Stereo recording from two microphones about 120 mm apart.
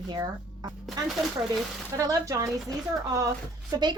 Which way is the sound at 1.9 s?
30° right (ahead or behind).